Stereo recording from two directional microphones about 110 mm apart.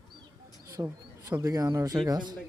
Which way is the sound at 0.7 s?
25° right (ahead or behind).